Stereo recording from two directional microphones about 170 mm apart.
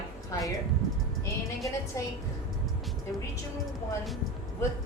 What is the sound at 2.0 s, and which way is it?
Speech, 20° left (ahead or behind).